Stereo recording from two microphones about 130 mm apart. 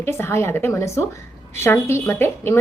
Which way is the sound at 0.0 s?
20° left (ahead or behind).